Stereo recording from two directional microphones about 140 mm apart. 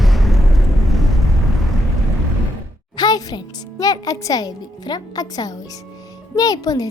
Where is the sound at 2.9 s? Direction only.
30° left (ahead or behind).